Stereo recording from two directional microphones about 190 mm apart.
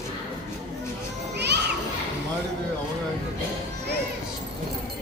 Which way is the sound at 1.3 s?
60° right (ahead or behind).